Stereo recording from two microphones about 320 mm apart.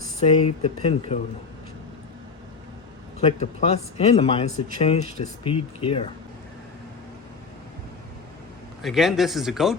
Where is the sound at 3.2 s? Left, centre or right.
Centre.